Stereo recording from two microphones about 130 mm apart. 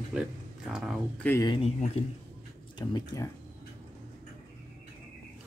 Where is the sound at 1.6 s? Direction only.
50° left (ahead or behind).